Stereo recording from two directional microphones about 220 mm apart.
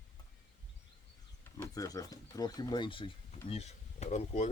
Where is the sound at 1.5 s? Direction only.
15° left (ahead or behind).